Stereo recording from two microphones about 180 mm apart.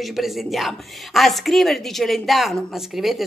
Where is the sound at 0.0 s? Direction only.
Centre (ahead or behind).